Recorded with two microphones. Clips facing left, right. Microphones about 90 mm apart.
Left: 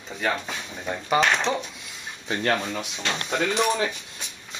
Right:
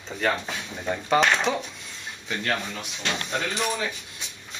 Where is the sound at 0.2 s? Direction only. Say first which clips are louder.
Right 1 dB; centre (ahead or behind).